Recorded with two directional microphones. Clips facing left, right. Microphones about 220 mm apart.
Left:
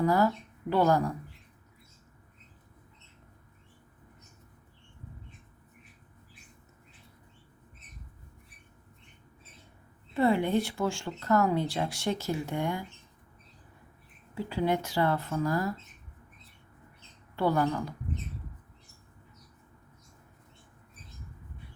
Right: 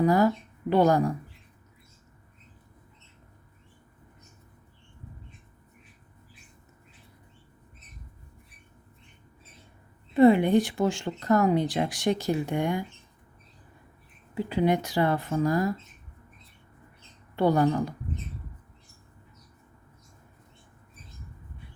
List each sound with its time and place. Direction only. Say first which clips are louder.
0.0 s speech: right 4 dB; 15° right (ahead or behind)
10.2 s speech: right 7 dB; 15° right (ahead or behind)
14.3 s speech: right 4 dB; 15° right (ahead or behind)
17.3 s a woman's voice: right 5 dB; 20° right (ahead or behind)